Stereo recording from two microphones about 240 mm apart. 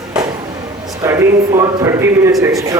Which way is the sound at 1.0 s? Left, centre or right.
Centre.